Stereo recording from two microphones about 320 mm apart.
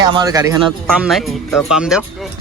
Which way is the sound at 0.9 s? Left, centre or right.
Centre.